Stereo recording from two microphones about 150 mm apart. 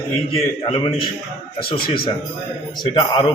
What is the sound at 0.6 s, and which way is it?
Speech, 35° left (ahead or behind).